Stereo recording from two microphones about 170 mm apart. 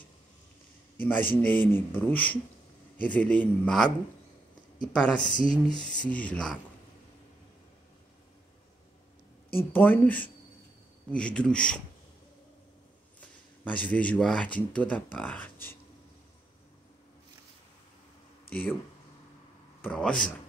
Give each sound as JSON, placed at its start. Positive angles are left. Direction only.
{"t": 1.0, "sound": "speech", "side_deg": 10}
{"t": 4.9, "sound": "speech", "side_deg": 5}
{"t": 5.5, "sound": "a sound", "side_deg": 25}
{"t": 5.9, "sound": "speech", "side_deg": 10}
{"t": 9.6, "sound": "speech", "side_deg": 10}
{"t": 13.2, "sound": "speech", "side_deg": 10}
{"t": 19.8, "sound": "speech", "side_deg": 5}